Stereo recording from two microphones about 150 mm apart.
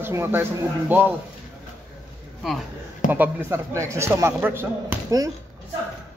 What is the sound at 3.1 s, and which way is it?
A man's voice, 10° right (ahead or behind).